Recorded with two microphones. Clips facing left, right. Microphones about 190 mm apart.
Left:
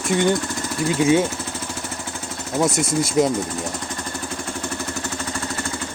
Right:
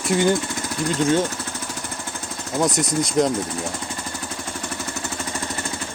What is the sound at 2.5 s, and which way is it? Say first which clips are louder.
Speech: left 1 dB; centre (ahead or behind).